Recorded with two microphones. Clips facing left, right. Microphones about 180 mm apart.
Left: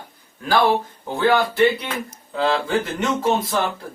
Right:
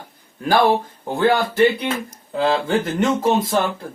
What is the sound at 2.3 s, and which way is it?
Speech, 25° right (ahead or behind).